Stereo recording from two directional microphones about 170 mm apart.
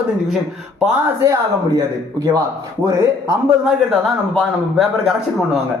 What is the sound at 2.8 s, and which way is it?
Speech, 20° right (ahead or behind).